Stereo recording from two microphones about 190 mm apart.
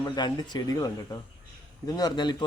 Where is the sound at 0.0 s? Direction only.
20° left (ahead or behind).